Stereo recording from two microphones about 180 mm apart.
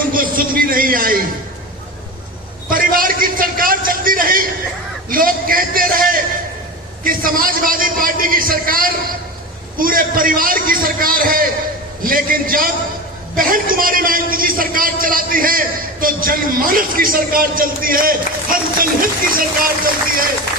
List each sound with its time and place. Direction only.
0.1 s a man's voice: 50° right (ahead or behind)
2.6 s a man's voice: 50° right (ahead or behind)